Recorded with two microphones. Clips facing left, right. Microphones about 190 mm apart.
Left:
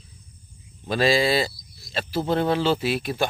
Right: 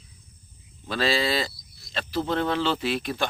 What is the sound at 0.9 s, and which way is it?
Speech, 15° left (ahead or behind).